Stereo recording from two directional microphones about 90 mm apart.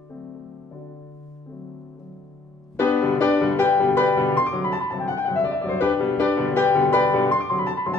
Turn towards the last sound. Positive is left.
turn(degrees=20)  # may be behind; listen again after turning